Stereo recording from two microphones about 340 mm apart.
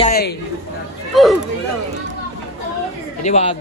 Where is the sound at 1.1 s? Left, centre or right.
Centre.